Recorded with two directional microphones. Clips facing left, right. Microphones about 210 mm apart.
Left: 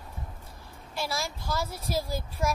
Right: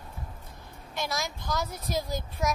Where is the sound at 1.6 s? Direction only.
30° left (ahead or behind).